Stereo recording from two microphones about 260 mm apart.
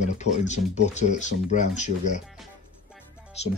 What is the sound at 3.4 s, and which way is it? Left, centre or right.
Speech, left.